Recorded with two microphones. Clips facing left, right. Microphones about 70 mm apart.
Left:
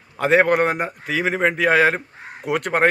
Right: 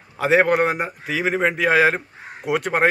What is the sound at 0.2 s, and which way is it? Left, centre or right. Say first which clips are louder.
Speech: left 1 dB; centre.